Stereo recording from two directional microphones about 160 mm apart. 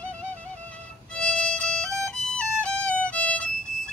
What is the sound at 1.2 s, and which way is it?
Violin, 5° left (ahead or behind).